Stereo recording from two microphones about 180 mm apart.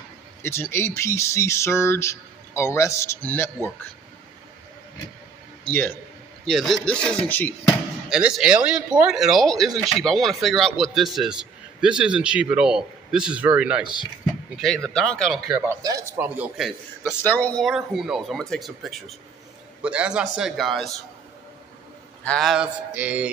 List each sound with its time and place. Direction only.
0.4 s speech: 15° left (ahead or behind)
5.7 s speech: 10° left (ahead or behind)
8.1 s speech: 5° right (ahead or behind)
15.8 s speech: 20° right (ahead or behind)
17.0 s speech: 10° left (ahead or behind)
22.2 s speech: 5° left (ahead or behind)